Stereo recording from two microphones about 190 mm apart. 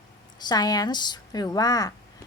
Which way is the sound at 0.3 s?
20° left (ahead or behind).